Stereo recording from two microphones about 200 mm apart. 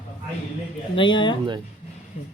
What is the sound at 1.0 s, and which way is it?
Speech, 25° left (ahead or behind).